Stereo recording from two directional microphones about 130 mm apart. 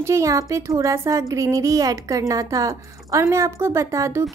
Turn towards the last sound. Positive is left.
turn(degrees=-25)  # may be behind; listen again after turning